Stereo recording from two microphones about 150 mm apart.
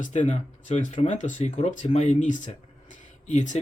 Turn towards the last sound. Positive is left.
turn(degrees=55)  # may be behind; listen again after turning